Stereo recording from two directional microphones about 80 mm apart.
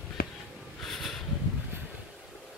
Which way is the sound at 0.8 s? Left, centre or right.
Centre.